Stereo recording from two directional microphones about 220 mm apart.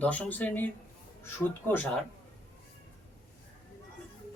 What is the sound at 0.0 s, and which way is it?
Speech, 5° left (ahead or behind).